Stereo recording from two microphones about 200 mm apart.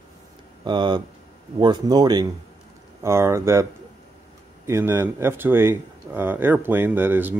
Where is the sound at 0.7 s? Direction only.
20° right (ahead or behind).